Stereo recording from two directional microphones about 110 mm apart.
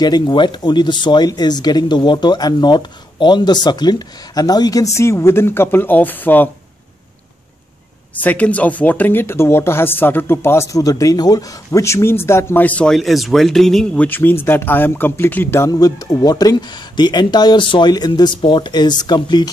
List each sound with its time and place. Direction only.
0.0 s speech: 40° left (ahead or behind)
4.9 s speech: 25° left (ahead or behind)
8.2 s speech: 15° left (ahead or behind)
13.9 s speech: 15° left (ahead or behind)
15.7 s speech: 35° left (ahead or behind)